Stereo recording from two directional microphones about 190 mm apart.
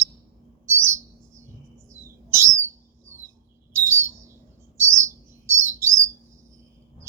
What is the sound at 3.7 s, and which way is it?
Bird, 15° right (ahead or behind).